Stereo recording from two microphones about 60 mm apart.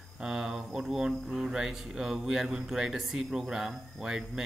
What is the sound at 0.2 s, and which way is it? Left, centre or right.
Speech, centre.